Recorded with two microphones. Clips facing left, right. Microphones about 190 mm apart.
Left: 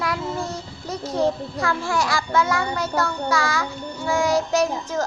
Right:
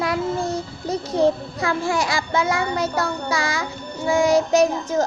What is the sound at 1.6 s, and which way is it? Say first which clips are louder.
A child's voice: right 2 dB; 20° right (ahead or behind).